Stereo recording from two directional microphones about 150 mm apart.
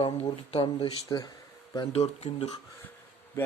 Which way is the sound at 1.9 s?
45° left (ahead or behind).